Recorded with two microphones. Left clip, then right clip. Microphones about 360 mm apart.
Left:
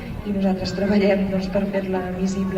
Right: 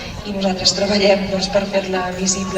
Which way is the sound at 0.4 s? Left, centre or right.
Right.